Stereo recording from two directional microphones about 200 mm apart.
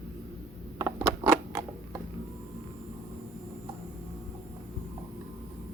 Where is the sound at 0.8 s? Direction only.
10° right (ahead or behind).